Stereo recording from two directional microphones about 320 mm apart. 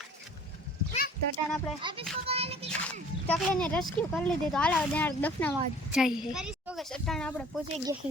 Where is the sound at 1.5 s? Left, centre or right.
Centre.